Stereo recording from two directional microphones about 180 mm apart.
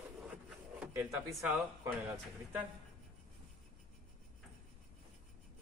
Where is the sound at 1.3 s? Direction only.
Centre (ahead or behind).